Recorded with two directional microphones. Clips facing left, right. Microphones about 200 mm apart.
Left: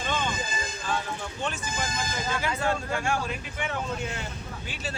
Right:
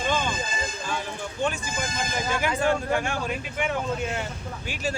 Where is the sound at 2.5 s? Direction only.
20° right (ahead or behind).